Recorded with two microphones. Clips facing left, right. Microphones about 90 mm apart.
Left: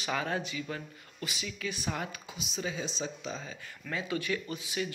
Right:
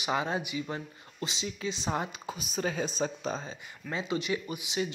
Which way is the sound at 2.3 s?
45° right (ahead or behind).